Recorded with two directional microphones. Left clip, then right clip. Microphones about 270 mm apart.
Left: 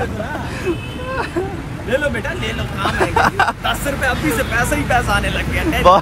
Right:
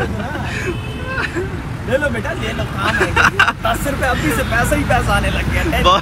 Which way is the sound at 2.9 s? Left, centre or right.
Centre.